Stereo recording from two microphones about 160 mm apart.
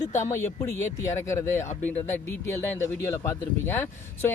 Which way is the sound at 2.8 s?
15° left (ahead or behind).